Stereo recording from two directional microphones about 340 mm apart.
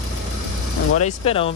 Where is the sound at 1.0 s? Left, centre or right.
Centre.